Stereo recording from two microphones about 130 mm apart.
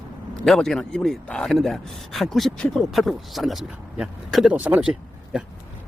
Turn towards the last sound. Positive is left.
turn(degrees=-5)  # may be behind; listen again after turning